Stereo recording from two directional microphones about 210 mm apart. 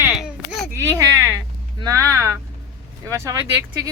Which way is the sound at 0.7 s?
10° right (ahead or behind).